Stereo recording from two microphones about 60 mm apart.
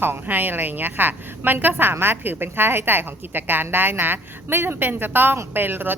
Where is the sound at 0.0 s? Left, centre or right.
Right.